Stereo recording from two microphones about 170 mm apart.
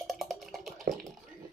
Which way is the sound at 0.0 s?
Centre (ahead or behind).